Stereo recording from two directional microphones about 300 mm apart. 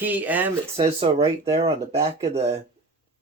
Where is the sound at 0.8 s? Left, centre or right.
Centre.